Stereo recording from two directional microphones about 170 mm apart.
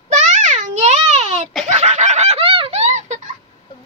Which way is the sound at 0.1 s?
45° right (ahead or behind).